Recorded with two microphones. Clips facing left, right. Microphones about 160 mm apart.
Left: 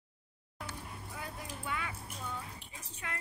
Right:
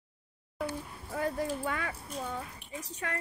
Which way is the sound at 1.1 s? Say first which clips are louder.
Right 14 dB; 45° right (ahead or behind).